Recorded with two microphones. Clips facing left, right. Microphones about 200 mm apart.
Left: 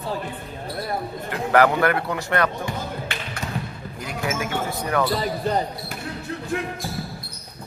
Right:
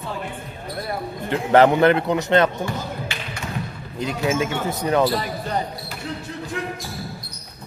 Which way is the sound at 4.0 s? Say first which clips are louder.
Right 6 dB; 25° right (ahead or behind).